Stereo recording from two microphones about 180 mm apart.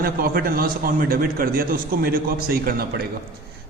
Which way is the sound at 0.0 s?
55° right (ahead or behind).